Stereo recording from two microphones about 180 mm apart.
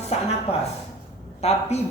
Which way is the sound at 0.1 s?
35° left (ahead or behind).